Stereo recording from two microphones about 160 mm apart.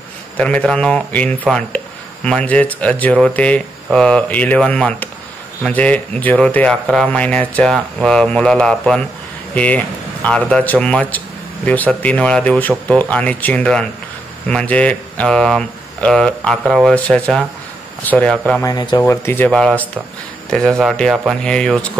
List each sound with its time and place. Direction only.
0.4 s speech: 10° left (ahead or behind)
18.6 s speech: 25° left (ahead or behind)
19.0 s speech: 15° left (ahead or behind)